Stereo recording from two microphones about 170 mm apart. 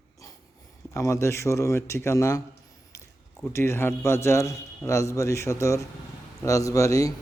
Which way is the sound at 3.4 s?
15° left (ahead or behind).